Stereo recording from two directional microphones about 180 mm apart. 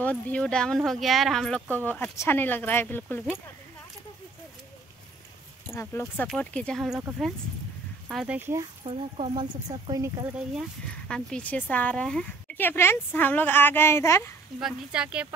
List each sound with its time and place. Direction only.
0.0 s speech: 5° left (ahead or behind)
5.7 s speech: 15° left (ahead or behind)
8.4 s speech: 15° right (ahead or behind)
8.8 s speech: 35° right (ahead or behind)
9.7 s speech: 20° right (ahead or behind)
10.5 s speech: centre (ahead or behind)
14.6 s speech: 5° right (ahead or behind)